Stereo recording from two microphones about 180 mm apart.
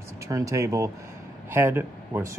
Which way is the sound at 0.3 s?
15° right (ahead or behind).